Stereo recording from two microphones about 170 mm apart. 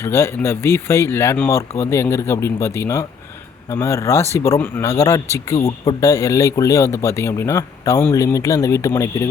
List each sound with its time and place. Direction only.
0.0 s speech: 15° left (ahead or behind)